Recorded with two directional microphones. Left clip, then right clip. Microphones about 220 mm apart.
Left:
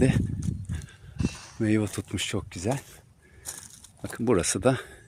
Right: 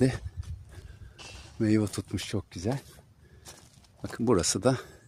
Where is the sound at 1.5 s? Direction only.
5° right (ahead or behind).